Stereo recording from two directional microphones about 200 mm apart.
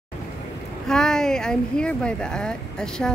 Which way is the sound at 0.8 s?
5° left (ahead or behind).